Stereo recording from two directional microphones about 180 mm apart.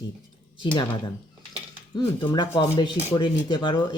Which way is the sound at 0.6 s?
25° left (ahead or behind).